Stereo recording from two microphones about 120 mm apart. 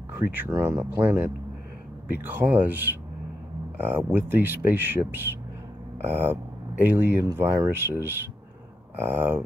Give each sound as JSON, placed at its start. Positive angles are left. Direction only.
{"t": 0.1, "sound": "speech", "side_deg": -15}